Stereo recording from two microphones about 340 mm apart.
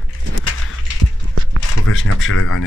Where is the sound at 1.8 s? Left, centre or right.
Left.